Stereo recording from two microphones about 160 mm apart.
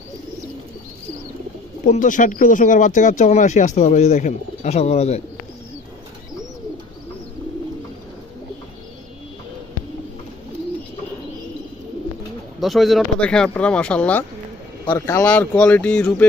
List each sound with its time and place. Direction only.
1.9 s speech: 55° left (ahead or behind)
12.5 s speech: centre (ahead or behind)
14.9 s speech: 20° left (ahead or behind)